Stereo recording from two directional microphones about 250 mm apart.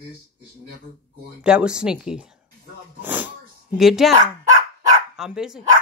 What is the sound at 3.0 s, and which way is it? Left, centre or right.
Sneeze, centre.